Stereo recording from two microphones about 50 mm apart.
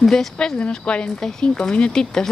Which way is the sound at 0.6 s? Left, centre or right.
Left.